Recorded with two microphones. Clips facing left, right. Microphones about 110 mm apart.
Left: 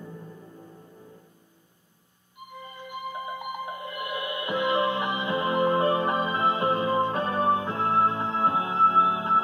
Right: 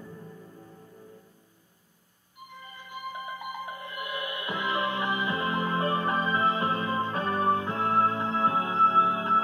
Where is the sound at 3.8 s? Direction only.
20° left (ahead or behind).